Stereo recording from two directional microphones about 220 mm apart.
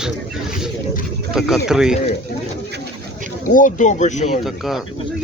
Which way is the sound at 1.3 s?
Centre (ahead or behind).